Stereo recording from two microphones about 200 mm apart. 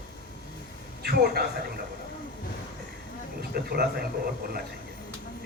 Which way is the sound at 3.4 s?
50° right (ahead or behind).